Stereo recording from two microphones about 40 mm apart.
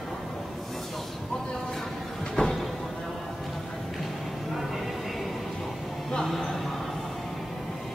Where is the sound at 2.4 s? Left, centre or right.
Left.